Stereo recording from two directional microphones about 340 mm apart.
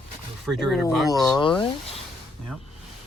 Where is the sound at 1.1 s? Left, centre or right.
Centre.